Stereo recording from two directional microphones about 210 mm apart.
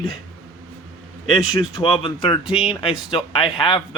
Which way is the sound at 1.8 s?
25° left (ahead or behind).